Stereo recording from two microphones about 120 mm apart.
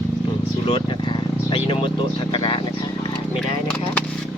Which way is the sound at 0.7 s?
40° left (ahead or behind).